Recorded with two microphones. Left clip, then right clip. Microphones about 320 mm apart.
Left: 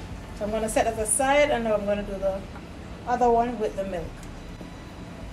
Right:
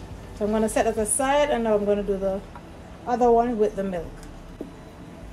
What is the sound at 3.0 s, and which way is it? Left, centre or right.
Speech, right.